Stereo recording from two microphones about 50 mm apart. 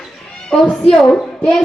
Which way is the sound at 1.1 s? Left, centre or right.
Left.